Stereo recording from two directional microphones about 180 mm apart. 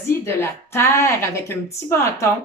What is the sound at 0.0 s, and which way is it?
A woman's voice, 15° left (ahead or behind).